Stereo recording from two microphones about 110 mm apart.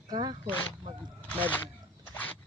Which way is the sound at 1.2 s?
15° left (ahead or behind).